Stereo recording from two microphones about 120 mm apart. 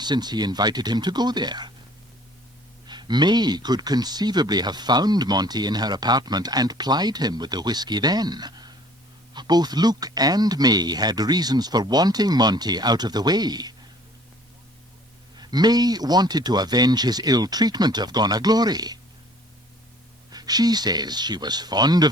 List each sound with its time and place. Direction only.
0.0 s speech: 35° right (ahead or behind)
2.8 s speech: 40° right (ahead or behind)
15.4 s speech: 35° right (ahead or behind)
20.3 s speech: 35° right (ahead or behind)